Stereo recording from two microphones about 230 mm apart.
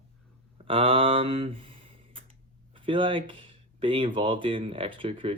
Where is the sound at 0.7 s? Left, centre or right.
Right.